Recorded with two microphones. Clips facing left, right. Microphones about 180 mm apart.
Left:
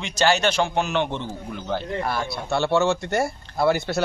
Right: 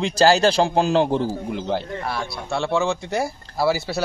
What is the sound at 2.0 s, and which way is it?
Speech, centre (ahead or behind).